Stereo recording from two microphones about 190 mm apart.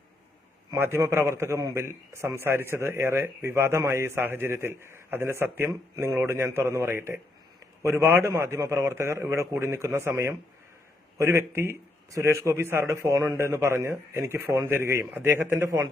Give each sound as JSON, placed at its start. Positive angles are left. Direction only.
{"t": 0.7, "sound": "a man's voice", "side_deg": -15}